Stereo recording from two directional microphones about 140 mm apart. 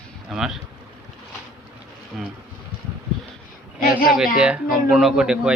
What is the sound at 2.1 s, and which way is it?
Speech, 5° right (ahead or behind).